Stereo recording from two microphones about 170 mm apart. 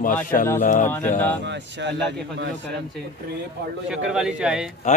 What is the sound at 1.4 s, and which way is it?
Speech, 90° right.